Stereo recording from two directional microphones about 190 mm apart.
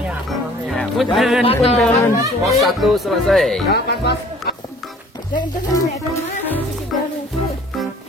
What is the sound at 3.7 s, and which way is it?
Speech, 60° left (ahead or behind).